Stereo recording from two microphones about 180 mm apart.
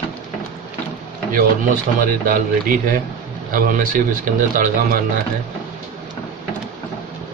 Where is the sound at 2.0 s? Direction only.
50° right (ahead or behind).